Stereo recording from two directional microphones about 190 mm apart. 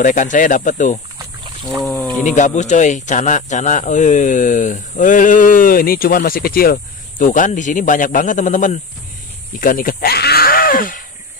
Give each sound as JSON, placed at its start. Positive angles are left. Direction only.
{"t": 0.0, "sound": "speech", "side_deg": 40}
{"t": 1.8, "sound": "speech", "side_deg": 10}
{"t": 2.2, "sound": "speech", "side_deg": 40}